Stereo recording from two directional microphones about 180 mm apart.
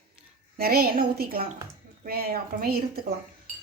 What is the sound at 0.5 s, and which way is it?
A woman's voice, 60° right (ahead or behind).